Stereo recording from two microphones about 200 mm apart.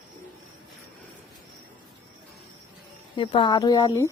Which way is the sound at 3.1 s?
25° left (ahead or behind).